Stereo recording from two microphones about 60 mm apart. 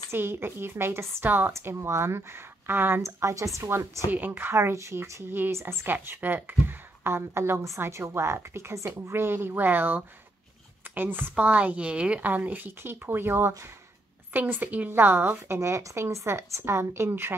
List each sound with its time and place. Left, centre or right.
0.1 s a woman's voice: right
1.6 s a woman's voice: right
3.0 s speech: right
4.1 s a woman's voice: right
4.6 s a woman's voice: right
5.3 s a woman's voice: right
5.9 s a woman's voice: right
7.0 s a woman's voice: right
9.1 s a woman's voice: right
14.9 s a woman's voice: right